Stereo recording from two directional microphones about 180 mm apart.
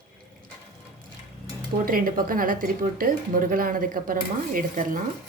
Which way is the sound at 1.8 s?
50° right (ahead or behind).